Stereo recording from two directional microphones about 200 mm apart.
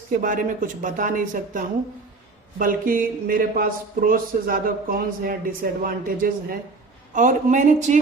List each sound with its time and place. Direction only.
0.2 s speech: 40° right (ahead or behind)